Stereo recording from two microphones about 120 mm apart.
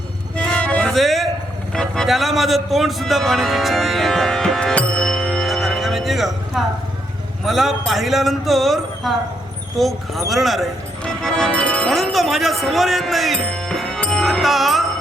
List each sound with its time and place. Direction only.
0.3 s music: 10° left (ahead or behind)
1.7 s a man's voice: 5° left (ahead or behind)